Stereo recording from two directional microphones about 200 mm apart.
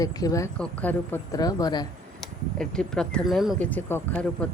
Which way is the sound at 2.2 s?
5° left (ahead or behind).